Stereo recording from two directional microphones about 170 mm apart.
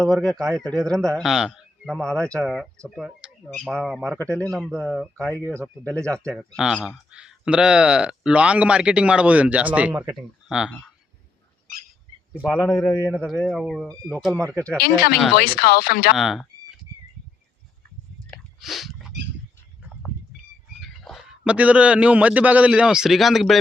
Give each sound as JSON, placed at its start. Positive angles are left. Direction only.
{"t": 0.0, "sound": "a man's voice", "side_deg": 5}
{"t": 5.4, "sound": "speech", "side_deg": -15}
{"t": 6.1, "sound": "speech", "side_deg": 5}
{"t": 12.3, "sound": "speech", "side_deg": -10}
{"t": 12.9, "sound": "a man's voice", "side_deg": 20}
{"t": 13.2, "sound": "speech", "side_deg": 5}
{"t": 14.8, "sound": "speech", "side_deg": 65}
{"t": 15.1, "sound": "speech", "side_deg": 0}
{"t": 15.4, "sound": "speech", "side_deg": 65}
{"t": 16.1, "sound": "a sound", "side_deg": 0}
{"t": 18.6, "sound": "a sound", "side_deg": 0}
{"t": 20.7, "sound": "speech", "side_deg": 0}